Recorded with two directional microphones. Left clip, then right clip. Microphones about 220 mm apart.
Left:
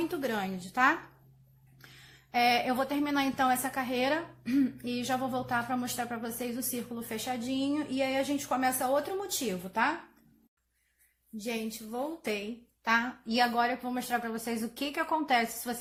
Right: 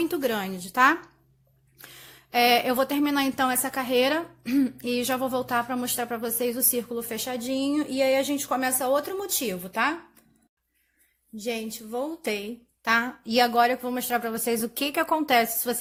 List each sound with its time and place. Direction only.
0.1 s a woman's voice: 45° right (ahead or behind)
11.3 s a woman's voice: 40° right (ahead or behind)